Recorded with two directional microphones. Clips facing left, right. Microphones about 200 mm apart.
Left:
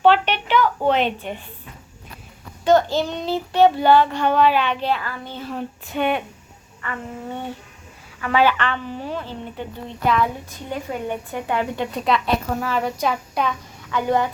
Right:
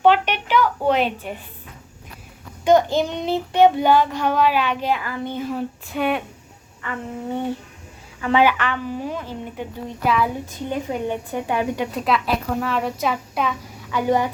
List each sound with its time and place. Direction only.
0.0 s a sound: 10° right (ahead or behind)
2.6 s child singing: 15° right (ahead or behind); by 6.2 s centre (ahead or behind)
8.2 s a woman's voice: 20° right (ahead or behind)
8.5 s child singing: 10° right (ahead or behind)
10.7 s child singing: 15° right (ahead or behind)
11.9 s a woman's voice: 5° right (ahead or behind)
13.9 s child singing: 15° right (ahead or behind)